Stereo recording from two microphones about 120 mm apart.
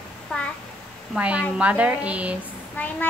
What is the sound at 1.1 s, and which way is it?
A woman's voice, 10° right (ahead or behind).